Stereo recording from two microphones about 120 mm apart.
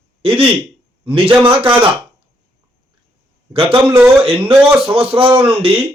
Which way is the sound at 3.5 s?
50° right (ahead or behind).